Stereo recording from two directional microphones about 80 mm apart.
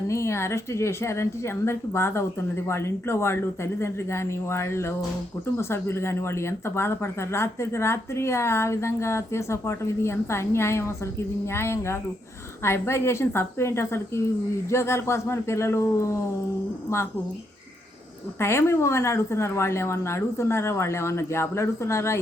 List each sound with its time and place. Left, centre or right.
0.1 s speech: left
18.3 s speech: left